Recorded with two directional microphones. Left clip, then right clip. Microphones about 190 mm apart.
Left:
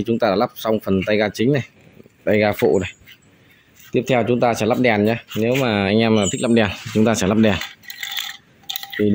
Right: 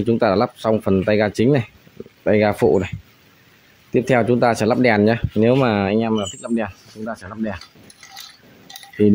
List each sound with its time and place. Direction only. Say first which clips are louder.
0.0 s speech: right 1 dB; 10° right (ahead or behind)
3.9 s speech: right 1 dB; 20° right (ahead or behind); by 6.7 s centre (ahead or behind)
7.1 s speech: left 9 dB; 15° left (ahead or behind)